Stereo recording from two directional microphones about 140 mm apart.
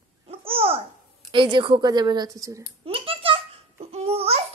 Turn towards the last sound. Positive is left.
turn(degrees=-45)  # may be behind; listen again after turning